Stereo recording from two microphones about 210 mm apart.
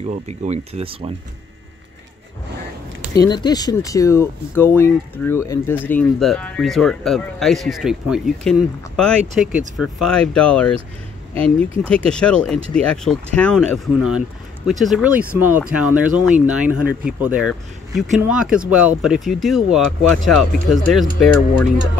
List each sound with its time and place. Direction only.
0.0 s speech: 35° right (ahead or behind)
3.2 s speech: 20° left (ahead or behind); by 10.7 s 5° left (ahead or behind)
11.9 s speech: 5° left (ahead or behind)